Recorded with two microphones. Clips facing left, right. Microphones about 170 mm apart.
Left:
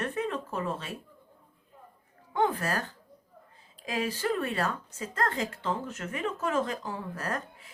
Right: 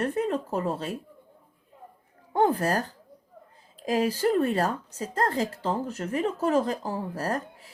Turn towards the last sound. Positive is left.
turn(degrees=-35)  # may be behind; listen again after turning